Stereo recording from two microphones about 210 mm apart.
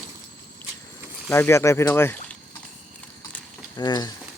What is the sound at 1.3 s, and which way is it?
Speech, 15° left (ahead or behind).